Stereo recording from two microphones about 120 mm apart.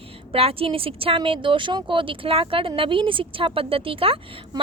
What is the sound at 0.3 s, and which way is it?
A woman's voice, 50° right (ahead or behind).